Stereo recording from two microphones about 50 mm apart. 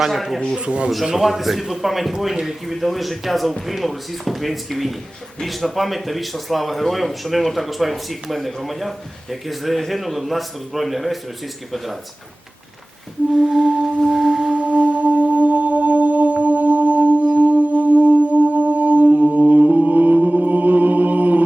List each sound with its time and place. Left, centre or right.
0.0 s speech: centre
0.5 s speech: centre
1.0 s speech: centre
13.4 s music: centre
14.0 s singing bowl: centre
14.5 s music: right